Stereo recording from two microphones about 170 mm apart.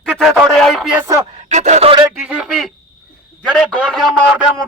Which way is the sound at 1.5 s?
45° right (ahead or behind).